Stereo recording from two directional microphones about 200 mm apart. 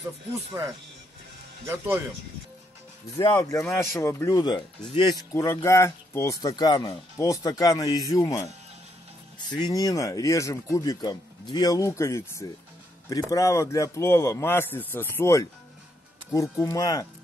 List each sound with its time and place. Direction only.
3.2 s speech: 15° left (ahead or behind)